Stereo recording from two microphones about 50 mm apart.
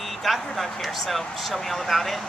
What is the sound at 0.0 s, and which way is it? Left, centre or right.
Speech, centre.